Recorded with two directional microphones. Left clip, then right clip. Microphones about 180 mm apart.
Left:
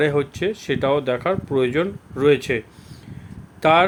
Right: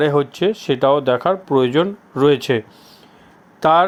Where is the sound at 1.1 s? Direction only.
10° left (ahead or behind).